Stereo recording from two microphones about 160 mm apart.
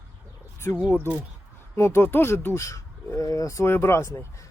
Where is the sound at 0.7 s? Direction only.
20° left (ahead or behind).